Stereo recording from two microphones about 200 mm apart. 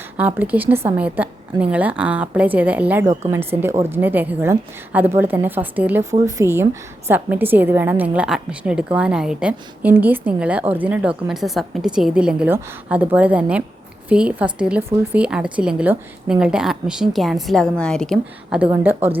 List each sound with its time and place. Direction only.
0.2 s a woman's voice: 10° right (ahead or behind)